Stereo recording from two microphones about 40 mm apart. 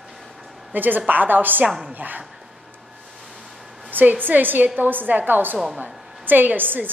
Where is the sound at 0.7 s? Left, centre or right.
Right.